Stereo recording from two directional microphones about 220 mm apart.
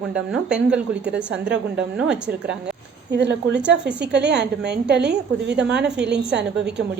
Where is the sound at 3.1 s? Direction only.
50° right (ahead or behind).